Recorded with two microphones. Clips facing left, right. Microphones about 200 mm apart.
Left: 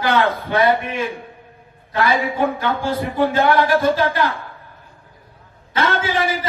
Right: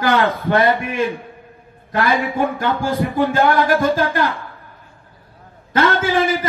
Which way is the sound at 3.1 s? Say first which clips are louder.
Left 1 dB; 45° right (ahead or behind).